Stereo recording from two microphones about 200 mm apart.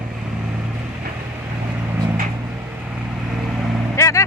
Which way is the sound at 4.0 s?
15° left (ahead or behind).